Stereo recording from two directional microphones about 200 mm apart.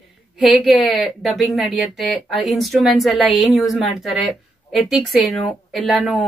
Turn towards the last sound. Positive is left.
turn(degrees=0)  # may be behind; listen again after turning